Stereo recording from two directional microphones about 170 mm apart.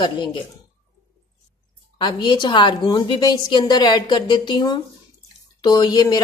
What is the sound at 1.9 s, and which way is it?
A woman's voice, 25° left (ahead or behind).